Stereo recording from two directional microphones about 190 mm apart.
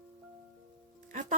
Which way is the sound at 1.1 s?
40° right (ahead or behind).